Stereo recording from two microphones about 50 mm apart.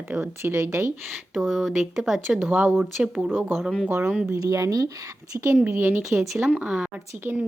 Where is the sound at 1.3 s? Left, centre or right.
Centre.